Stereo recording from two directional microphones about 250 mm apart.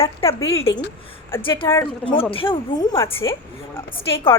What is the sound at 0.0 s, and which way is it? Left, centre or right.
Speech, left.